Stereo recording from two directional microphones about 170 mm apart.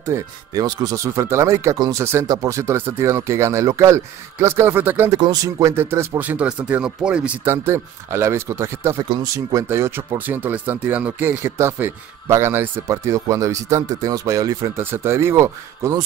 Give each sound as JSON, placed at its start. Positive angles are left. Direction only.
{"t": 0.1, "sound": "speech", "side_deg": -20}